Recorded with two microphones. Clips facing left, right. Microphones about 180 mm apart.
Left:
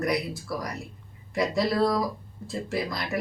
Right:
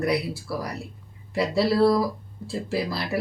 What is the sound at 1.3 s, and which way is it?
Speech, 30° right (ahead or behind).